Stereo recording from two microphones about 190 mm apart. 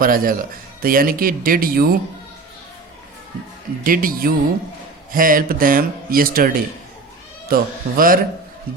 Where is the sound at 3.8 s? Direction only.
45° right (ahead or behind).